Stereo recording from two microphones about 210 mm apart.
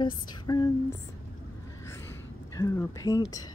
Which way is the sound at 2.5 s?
15° left (ahead or behind).